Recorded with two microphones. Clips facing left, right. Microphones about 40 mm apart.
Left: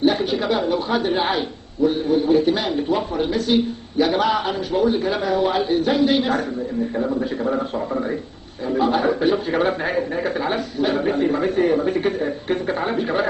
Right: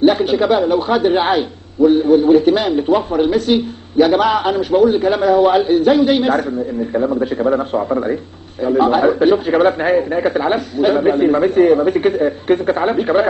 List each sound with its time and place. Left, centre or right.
0.0 s a man's voice: right
1.8 s a man's voice: right
7.0 s a man's voice: right
8.7 s a man's voice: right